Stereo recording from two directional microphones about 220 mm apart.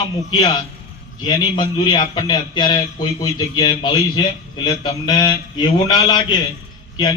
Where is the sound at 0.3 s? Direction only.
20° left (ahead or behind).